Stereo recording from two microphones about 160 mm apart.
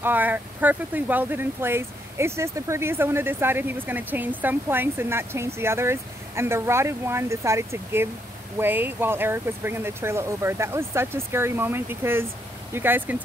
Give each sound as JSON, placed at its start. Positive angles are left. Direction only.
{"t": 0.0, "sound": "speech", "side_deg": -10}